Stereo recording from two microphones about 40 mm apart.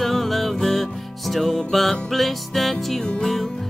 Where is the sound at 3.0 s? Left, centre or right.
Centre.